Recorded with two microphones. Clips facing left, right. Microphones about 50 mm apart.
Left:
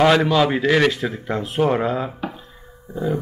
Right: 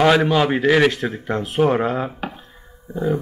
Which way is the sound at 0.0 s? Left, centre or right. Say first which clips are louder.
Even; centre.